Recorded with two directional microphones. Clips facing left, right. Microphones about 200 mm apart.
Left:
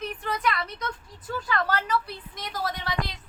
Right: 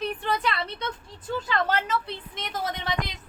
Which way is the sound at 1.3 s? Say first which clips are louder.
Right 2 dB; 25° right (ahead or behind).